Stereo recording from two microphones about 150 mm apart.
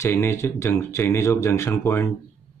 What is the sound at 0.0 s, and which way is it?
Speech, 15° left (ahead or behind).